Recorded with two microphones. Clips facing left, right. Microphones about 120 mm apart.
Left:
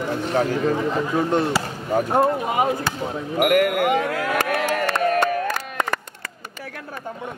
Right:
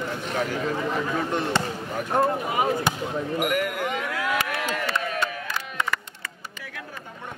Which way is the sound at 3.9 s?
45° left (ahead or behind).